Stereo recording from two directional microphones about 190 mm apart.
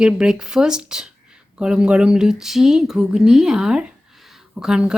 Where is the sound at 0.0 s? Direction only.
5° right (ahead or behind).